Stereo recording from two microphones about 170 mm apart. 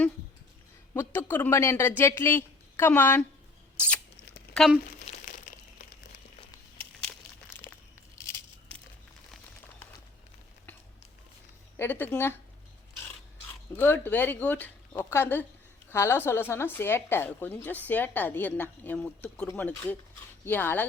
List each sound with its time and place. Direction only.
0.9 s speech: 15° left (ahead or behind)
3.8 s a sound: 10° left (ahead or behind)
4.5 s speech: centre (ahead or behind)
4.9 s crumpling: 45° left (ahead or behind)
7.7 s a sound: 15° left (ahead or behind)
11.8 s speech: 10° left (ahead or behind)
13.7 s speech: 10° left (ahead or behind)